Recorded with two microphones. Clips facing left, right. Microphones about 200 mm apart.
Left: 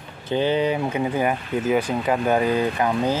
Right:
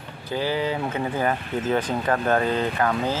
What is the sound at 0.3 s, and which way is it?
Speech, 20° left (ahead or behind).